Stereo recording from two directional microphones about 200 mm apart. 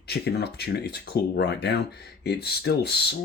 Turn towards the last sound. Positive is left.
turn(degrees=55)  # may be behind; listen again after turning